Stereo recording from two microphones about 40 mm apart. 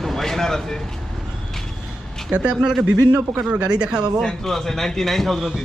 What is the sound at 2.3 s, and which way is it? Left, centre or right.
Speech, right.